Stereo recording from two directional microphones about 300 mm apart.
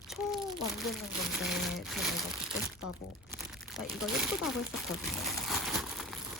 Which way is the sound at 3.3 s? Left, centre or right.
Centre.